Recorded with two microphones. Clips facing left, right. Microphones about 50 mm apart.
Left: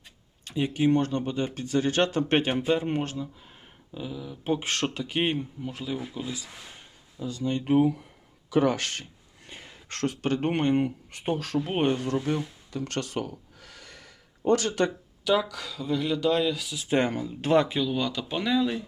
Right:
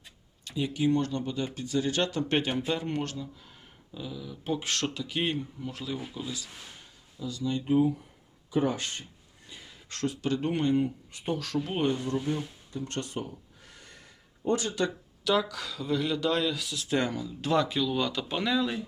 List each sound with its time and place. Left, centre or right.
0.4 s speech: left
2.6 s speech: left
4.4 s speech: left
5.7 s speech: centre
6.1 s speech: left
7.2 s speech: left
7.6 s speech: left
9.5 s speech: left
11.2 s speech: left
11.9 s a sound: left
15.2 s speech: centre
16.9 s speech: left
17.7 s speech: centre
17.9 s speech: centre